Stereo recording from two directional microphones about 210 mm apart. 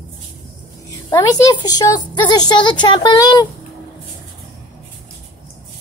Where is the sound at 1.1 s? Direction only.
15° left (ahead or behind).